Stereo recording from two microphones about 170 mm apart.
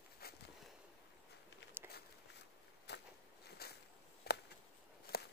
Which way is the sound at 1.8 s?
10° right (ahead or behind).